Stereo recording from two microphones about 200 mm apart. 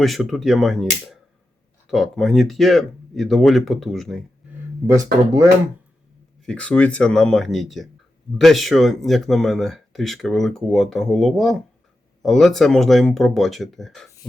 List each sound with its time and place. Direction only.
0.0 s speech: centre (ahead or behind)
4.9 s speech: 15° right (ahead or behind)
6.4 s speech: 5° left (ahead or behind)